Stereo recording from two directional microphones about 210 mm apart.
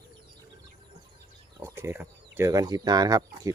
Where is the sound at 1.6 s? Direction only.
10° right (ahead or behind).